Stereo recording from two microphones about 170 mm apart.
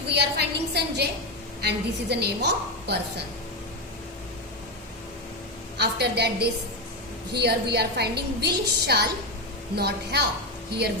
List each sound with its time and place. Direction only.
0.1 s a sound: 80° right
1.6 s a woman's voice: 80° right
5.7 s a woman's voice: 75° right (ahead or behind)